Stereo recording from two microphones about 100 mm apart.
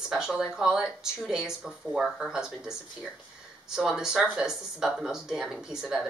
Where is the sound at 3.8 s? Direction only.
5° right (ahead or behind).